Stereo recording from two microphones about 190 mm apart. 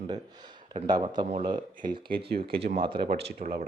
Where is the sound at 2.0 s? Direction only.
55° right (ahead or behind).